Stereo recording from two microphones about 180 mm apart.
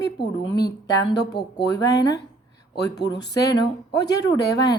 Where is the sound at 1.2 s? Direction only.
70° left (ahead or behind).